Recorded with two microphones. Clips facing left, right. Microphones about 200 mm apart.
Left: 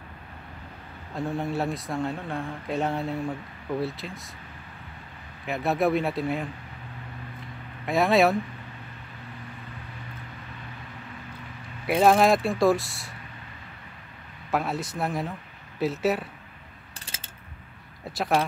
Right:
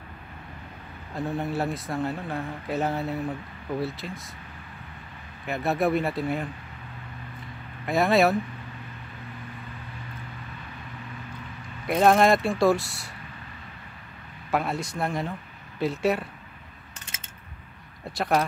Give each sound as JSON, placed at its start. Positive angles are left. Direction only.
{"t": 1.1, "sound": "speech", "side_deg": 0}
{"t": 5.5, "sound": "speech", "side_deg": 0}
{"t": 7.8, "sound": "speech", "side_deg": 0}
{"t": 11.8, "sound": "speech", "side_deg": 5}
{"t": 14.5, "sound": "speech", "side_deg": 0}
{"t": 17.0, "sound": "a sound", "side_deg": 30}
{"t": 18.1, "sound": "speech", "side_deg": 0}